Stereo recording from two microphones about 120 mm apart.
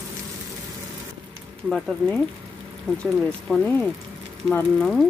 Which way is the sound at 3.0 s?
5° left (ahead or behind).